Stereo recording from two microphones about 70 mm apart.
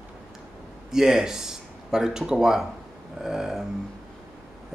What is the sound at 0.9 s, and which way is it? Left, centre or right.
Speech, centre.